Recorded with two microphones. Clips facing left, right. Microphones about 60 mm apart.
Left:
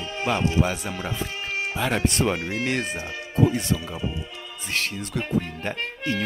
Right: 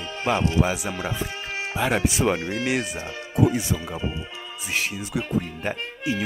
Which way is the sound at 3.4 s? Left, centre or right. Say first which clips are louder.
Even; centre.